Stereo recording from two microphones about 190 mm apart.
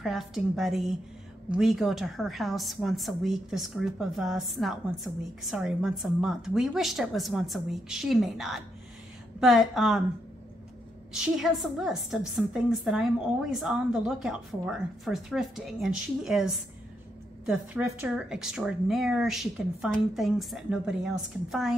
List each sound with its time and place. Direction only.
0.0 s a woman's voice: centre (ahead or behind)
11.1 s a woman's voice: centre (ahead or behind)